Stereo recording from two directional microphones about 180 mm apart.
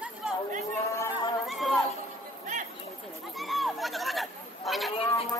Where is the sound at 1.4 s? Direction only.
Centre (ahead or behind).